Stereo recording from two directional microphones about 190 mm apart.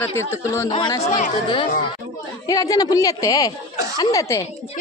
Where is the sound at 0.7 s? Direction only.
25° left (ahead or behind).